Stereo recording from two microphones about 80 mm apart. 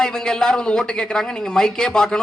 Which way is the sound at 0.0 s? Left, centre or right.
Centre.